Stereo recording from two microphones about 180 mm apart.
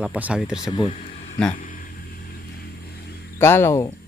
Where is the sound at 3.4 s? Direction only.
15° left (ahead or behind).